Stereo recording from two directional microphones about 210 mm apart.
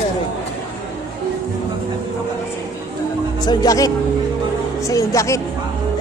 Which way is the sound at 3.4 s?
20° left (ahead or behind).